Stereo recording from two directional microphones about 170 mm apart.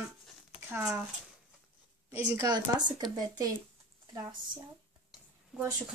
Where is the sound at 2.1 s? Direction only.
10° right (ahead or behind).